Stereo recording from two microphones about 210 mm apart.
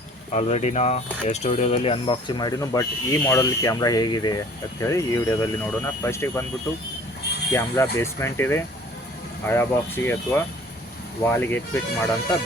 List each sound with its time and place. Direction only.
0.3 s speech: 30° left (ahead or behind); by 6.4 s 15° left (ahead or behind)
7.5 s speech: 10° left (ahead or behind)